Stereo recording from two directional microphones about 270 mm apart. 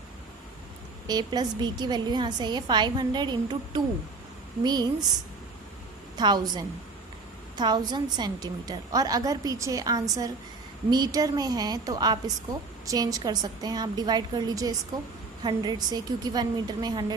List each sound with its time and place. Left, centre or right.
1.0 s a woman's voice: centre
6.1 s a woman's voice: centre